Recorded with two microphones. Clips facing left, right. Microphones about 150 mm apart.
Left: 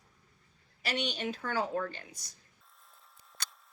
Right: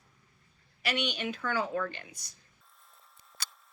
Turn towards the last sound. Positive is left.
turn(degrees=-5)  # may be behind; listen again after turning